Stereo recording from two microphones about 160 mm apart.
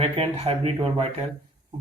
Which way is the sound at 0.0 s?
40° right (ahead or behind).